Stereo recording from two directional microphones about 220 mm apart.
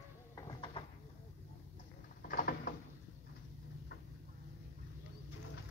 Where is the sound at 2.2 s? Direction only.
40° left (ahead or behind).